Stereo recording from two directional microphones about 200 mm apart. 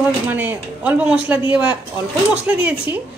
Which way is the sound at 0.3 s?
10° right (ahead or behind).